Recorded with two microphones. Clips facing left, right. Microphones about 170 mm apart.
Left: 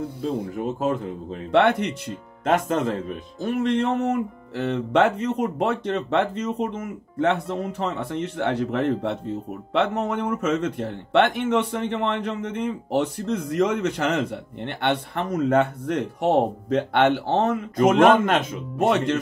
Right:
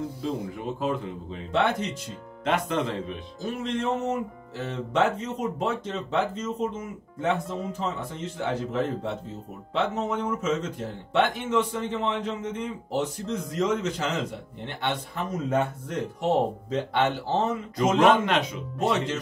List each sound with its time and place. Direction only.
0.6 s a man's voice: 45° left (ahead or behind)
1.5 s speech: 65° left (ahead or behind)
2.4 s a man's voice: 45° left (ahead or behind)
3.3 s speech: 60° left (ahead or behind)